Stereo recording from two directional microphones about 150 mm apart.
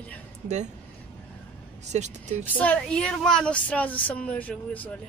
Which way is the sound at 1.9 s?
50° right (ahead or behind).